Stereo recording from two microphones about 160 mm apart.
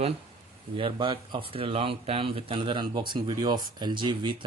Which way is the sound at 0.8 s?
30° right (ahead or behind).